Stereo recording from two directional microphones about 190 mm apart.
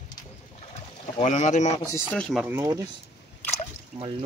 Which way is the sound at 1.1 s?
40° left (ahead or behind).